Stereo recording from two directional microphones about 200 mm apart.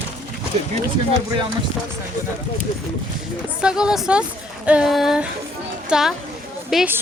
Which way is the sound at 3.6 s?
5° right (ahead or behind).